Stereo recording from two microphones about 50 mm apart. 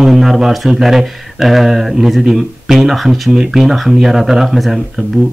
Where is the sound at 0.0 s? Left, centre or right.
Centre.